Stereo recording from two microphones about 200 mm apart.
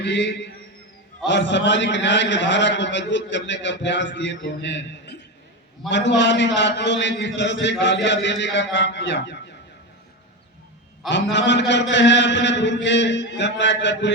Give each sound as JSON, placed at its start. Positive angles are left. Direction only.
{"t": 0.0, "sound": "a man's voice", "side_deg": 60}
{"t": 11.1, "sound": "a man's voice", "side_deg": 60}